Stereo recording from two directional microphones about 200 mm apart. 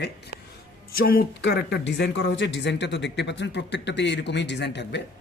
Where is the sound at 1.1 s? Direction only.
60° left (ahead or behind).